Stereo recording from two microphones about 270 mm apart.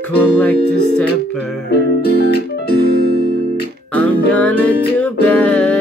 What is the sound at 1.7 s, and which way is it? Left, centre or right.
Music, left.